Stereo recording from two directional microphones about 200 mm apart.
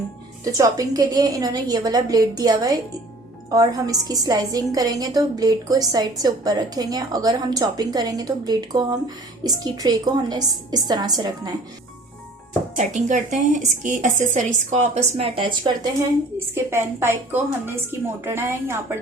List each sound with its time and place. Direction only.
0.4 s a woman's voice: 15° right (ahead or behind)
12.7 s a woman's voice: 35° right (ahead or behind)
16.6 s a woman's voice: 10° right (ahead or behind)